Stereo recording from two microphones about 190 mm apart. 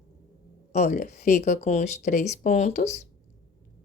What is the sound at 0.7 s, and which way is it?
Speech, 40° left (ahead or behind).